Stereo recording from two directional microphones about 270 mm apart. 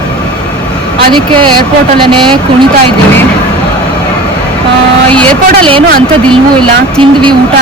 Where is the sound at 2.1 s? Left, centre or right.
Centre.